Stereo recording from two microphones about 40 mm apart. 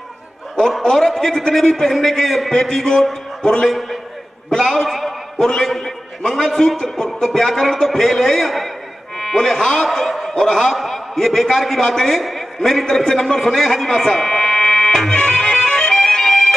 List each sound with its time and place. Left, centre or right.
0.6 s speech: centre
0.8 s a man's voice: centre
1.1 s a man's voice: centre
9.8 s snicker: centre
10.3 s a man's voice: centre
15.1 s music: centre